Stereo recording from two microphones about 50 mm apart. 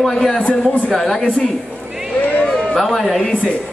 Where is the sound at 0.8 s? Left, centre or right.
Centre.